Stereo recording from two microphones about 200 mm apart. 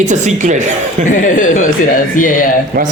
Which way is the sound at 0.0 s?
35° right (ahead or behind).